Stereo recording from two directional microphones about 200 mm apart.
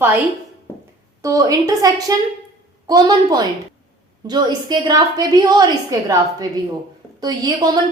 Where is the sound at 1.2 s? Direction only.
15° right (ahead or behind).